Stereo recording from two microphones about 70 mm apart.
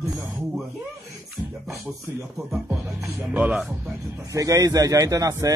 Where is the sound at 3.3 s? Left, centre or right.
Centre.